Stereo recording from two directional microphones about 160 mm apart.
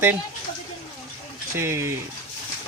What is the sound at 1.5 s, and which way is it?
Speech, 15° right (ahead or behind).